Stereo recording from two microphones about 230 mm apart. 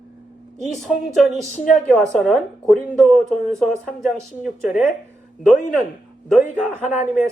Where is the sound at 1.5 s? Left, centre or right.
Left.